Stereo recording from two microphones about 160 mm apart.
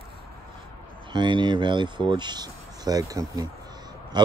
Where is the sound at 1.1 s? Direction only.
30° right (ahead or behind).